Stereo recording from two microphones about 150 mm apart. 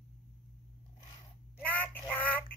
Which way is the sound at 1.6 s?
10° left (ahead or behind).